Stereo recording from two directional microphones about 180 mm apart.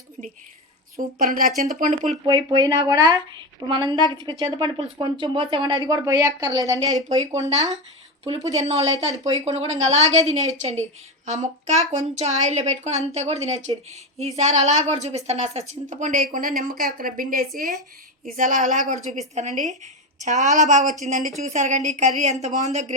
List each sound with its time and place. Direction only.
1.2 s speech: 50° right (ahead or behind)
2.2 s speech: 25° right (ahead or behind)
7.3 s a woman's voice: 40° right (ahead or behind)